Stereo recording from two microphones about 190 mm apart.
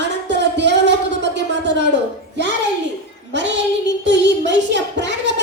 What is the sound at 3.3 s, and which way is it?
Child singing, 70° right (ahead or behind).